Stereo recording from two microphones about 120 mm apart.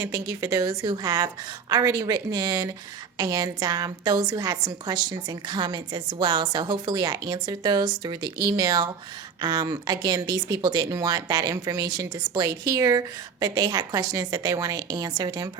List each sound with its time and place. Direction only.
0.0 s speech: 25° right (ahead or behind)